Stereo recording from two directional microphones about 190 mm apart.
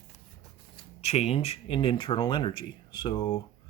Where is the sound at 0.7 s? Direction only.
35° left (ahead or behind).